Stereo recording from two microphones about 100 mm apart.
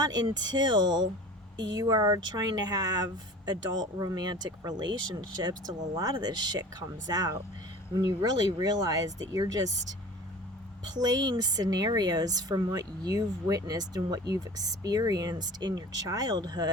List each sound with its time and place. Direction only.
0.0 s speech: 45° right (ahead or behind)
10.8 s speech: 45° right (ahead or behind)